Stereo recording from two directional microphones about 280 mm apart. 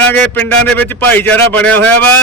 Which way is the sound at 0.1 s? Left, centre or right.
Centre.